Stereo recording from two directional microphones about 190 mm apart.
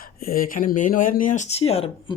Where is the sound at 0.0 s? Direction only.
50° left (ahead or behind); by 2.1 s 30° left (ahead or behind).